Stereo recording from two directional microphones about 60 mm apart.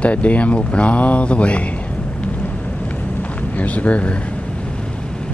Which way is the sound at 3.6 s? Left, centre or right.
Left.